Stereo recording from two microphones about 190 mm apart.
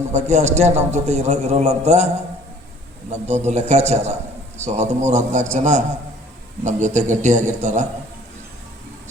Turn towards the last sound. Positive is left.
turn(degrees=-40)  # may be behind; listen again after turning